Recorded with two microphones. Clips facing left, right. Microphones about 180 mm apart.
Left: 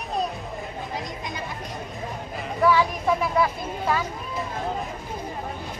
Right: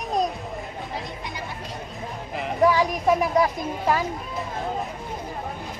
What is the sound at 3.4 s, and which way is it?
Speech, 35° right (ahead or behind).